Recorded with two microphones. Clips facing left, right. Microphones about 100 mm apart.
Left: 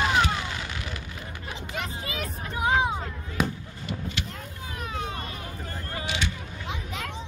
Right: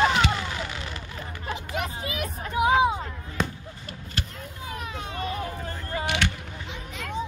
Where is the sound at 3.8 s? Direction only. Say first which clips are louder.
Left 3 dB; 40° right (ahead or behind).